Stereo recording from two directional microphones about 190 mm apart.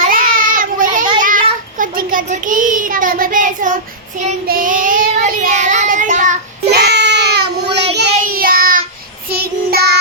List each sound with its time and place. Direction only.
0.0 s child singing: 45° right (ahead or behind)
1.2 s a sound: 45° right (ahead or behind)
1.8 s a child's voice: 45° right (ahead or behind)
4.4 s child singing: 50° right (ahead or behind)
6.7 s child singing: 60° right (ahead or behind)
8.2 s child singing: 50° right (ahead or behind)